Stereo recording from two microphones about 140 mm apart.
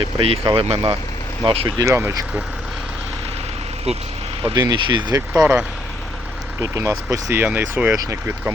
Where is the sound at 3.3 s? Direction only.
45° right (ahead or behind).